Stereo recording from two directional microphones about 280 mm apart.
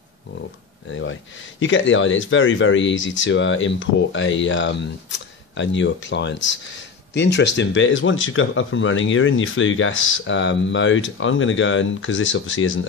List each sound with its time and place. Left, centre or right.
0.8 s speech: left